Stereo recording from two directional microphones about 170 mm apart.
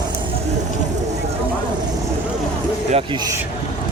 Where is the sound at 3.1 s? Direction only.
25° right (ahead or behind).